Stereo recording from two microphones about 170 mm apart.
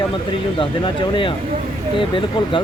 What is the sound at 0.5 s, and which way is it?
Speech, 30° left (ahead or behind).